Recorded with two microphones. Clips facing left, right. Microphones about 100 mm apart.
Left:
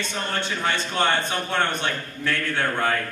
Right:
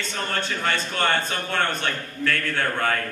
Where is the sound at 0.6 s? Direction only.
20° left (ahead or behind).